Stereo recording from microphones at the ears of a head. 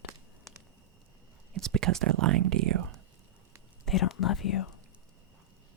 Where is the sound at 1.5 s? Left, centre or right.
Right.